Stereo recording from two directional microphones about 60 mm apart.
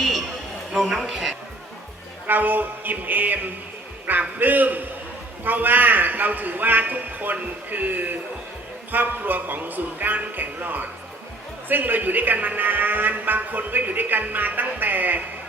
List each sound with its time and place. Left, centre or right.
0.7 s a woman's voice: centre
2.2 s a man's voice: right